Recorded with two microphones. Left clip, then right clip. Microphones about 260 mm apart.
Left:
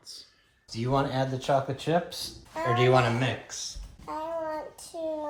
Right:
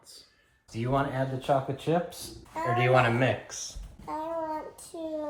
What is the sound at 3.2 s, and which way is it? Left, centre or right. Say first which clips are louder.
Speech: right 3 dB; centre.